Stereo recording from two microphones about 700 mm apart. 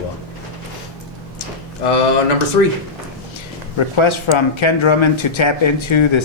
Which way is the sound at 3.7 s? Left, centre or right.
Left.